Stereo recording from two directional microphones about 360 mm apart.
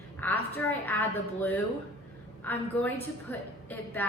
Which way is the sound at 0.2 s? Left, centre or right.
Centre.